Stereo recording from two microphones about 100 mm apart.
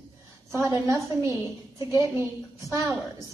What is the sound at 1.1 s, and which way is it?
Speech, 30° right (ahead or behind).